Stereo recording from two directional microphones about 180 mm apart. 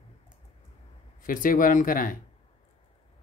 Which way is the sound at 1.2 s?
50° left (ahead or behind).